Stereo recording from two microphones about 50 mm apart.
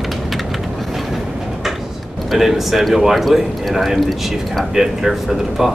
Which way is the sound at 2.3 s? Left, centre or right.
Centre.